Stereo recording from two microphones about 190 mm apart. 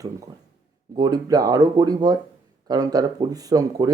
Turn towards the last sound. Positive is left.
turn(degrees=-20)  # may be behind; listen again after turning